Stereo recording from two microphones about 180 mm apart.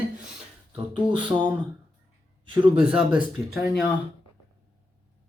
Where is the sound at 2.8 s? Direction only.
5° right (ahead or behind).